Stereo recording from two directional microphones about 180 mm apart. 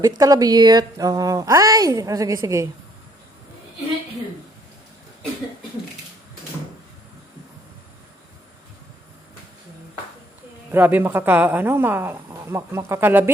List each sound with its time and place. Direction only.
0.2 s a woman's voice: 20° right (ahead or behind)
10.7 s a woman's voice: 10° right (ahead or behind)